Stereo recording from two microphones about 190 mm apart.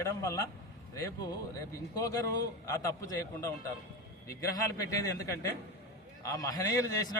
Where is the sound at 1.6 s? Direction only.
20° left (ahead or behind).